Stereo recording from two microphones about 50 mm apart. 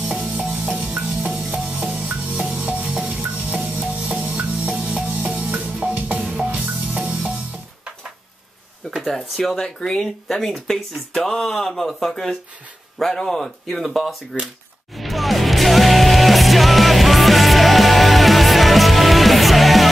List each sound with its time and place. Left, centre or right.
0.4 s music: centre
0.7 s music: right
1.3 s music: centre
3.2 s music: right
6.2 s music: right
9.0 s speech: centre
14.3 s speech: centre
15.0 s music: centre